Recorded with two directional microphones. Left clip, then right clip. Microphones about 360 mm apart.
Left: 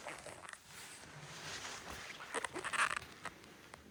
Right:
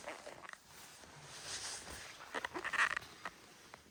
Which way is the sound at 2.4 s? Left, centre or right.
Left.